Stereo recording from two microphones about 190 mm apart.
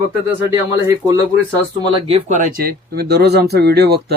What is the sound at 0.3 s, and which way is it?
Speech, 15° right (ahead or behind).